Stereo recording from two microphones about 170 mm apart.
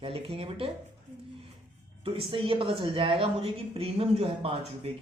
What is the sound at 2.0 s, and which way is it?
Speech, 35° right (ahead or behind).